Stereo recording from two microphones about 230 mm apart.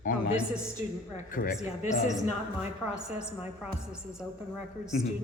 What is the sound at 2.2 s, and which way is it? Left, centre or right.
A woman's voice, centre.